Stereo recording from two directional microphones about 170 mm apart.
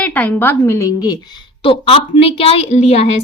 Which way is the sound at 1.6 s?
35° left (ahead or behind).